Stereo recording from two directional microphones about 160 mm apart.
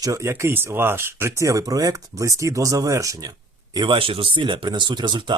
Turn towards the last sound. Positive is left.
turn(degrees=-30)  # may be behind; listen again after turning